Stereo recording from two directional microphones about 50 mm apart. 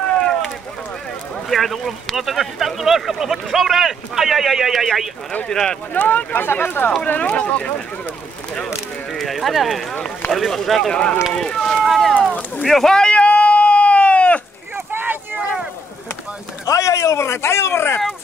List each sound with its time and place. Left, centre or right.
0.2 s a sound: centre
1.5 s speech: centre
5.5 s speech: centre
5.9 s speech: left
7.1 s speech: left
9.1 s speech: centre
12.9 s sheep: left
14.9 s boat: right
16.6 s speech: left